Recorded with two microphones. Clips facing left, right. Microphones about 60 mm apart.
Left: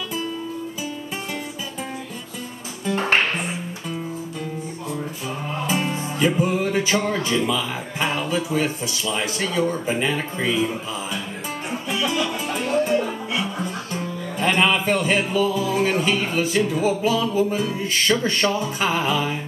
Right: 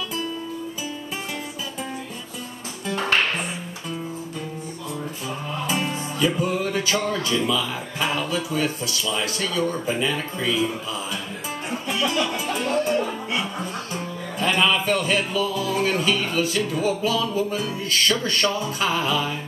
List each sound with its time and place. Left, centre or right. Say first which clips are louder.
3.0 s music: left 1 dB; left
5.7 s music: left 2 dB; centre
12.0 s music: even; centre
14.4 s music: left 1 dB; left